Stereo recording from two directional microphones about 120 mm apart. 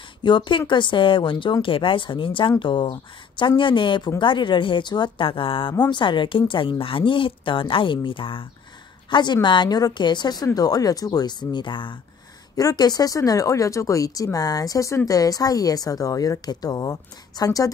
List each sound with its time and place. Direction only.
0.2 s a woman's voice: 40° left (ahead or behind)
12.5 s speech: 30° left (ahead or behind)